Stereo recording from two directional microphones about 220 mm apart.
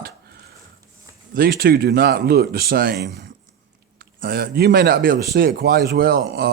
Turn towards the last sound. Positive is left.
turn(degrees=-45)  # may be behind; listen again after turning